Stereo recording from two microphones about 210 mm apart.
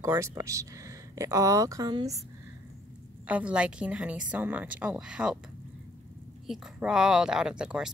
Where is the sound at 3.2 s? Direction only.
5° right (ahead or behind).